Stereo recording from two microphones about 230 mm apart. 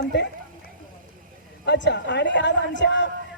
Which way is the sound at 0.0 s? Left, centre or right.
Left.